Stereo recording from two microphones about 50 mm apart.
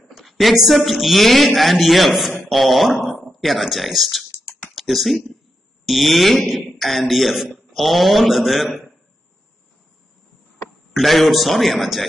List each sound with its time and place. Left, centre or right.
0.0 s speech: centre
2.5 s a sound: centre
3.3 s speech: centre
10.9 s speech: centre